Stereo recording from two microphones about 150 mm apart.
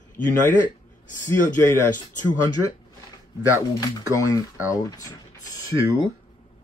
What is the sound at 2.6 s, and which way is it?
Speech, 20° right (ahead or behind).